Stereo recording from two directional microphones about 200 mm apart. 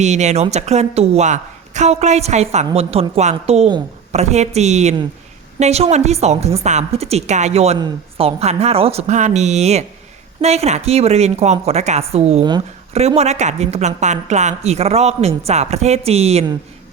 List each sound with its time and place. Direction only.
0.0 s a woman's voice: 35° right (ahead or behind)